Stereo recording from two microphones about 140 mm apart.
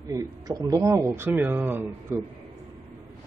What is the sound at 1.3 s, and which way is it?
Speech, 10° right (ahead or behind).